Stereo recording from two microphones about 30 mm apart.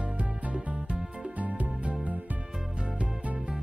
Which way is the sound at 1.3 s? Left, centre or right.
Right.